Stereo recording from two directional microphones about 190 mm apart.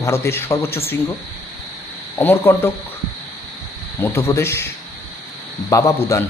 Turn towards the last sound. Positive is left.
turn(degrees=15)  # may be behind; listen again after turning